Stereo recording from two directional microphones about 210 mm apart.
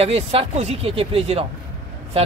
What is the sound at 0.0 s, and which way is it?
Speech, 30° right (ahead or behind).